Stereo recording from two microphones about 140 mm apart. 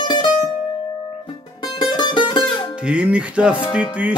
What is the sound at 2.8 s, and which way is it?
Music, 5° right (ahead or behind).